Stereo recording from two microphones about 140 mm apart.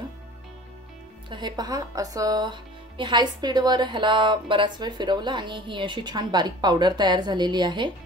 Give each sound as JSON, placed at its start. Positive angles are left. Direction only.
{"t": 1.3, "sound": "speech", "side_deg": -30}